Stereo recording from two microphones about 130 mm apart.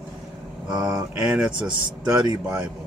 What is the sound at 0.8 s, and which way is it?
Speech, 5° right (ahead or behind).